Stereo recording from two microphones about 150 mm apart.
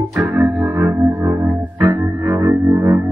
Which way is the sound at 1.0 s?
Centre (ahead or behind).